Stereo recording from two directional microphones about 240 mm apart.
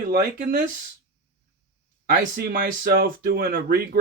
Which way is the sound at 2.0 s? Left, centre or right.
Right.